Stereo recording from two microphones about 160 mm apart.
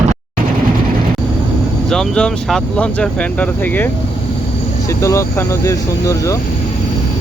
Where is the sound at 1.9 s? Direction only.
5° left (ahead or behind).